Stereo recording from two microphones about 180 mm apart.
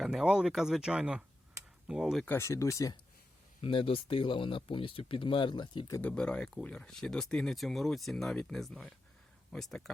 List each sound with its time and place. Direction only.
0.0 s speech: centre (ahead or behind)
2.2 s speech: 15° left (ahead or behind)
3.6 s speech: 30° left (ahead or behind)
6.0 s speech: 5° left (ahead or behind)